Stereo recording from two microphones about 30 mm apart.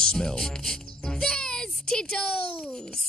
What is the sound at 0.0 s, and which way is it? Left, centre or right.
Speech, left.